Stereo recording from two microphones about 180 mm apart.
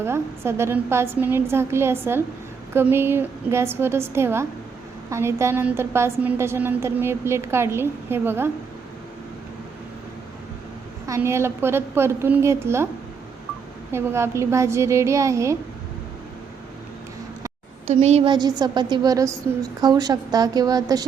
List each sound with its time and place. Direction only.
0.0 s a woman's voice: 15° right (ahead or behind)
11.0 s a woman's voice: 15° right (ahead or behind)
13.9 s a woman's voice: 15° right (ahead or behind)
17.8 s a woman's voice: 35° right (ahead or behind); by 21.0 s 20° right (ahead or behind)